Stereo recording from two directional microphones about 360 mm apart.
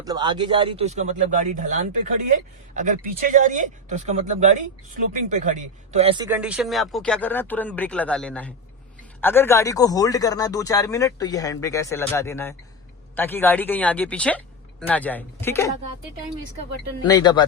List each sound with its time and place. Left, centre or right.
0.0 s speech: centre
17.0 s speech: centre